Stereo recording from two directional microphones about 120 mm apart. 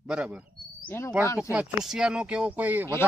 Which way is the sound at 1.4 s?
5° right (ahead or behind).